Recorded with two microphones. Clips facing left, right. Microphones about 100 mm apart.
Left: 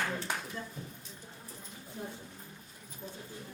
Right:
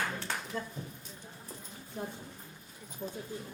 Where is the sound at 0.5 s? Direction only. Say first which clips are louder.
Right 4 dB; 60° right (ahead or behind).